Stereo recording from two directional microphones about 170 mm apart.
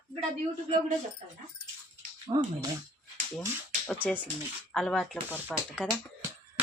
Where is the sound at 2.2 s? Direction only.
25° right (ahead or behind).